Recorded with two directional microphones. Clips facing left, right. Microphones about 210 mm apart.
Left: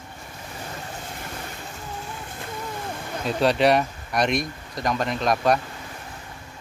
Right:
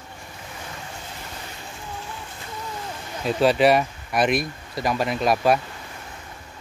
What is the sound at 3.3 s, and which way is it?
Speech, centre (ahead or behind).